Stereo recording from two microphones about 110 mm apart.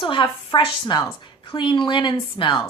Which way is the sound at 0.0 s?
45° left (ahead or behind).